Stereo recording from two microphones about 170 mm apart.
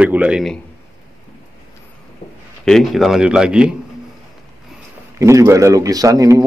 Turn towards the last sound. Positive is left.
turn(degrees=-20)  # may be behind; listen again after turning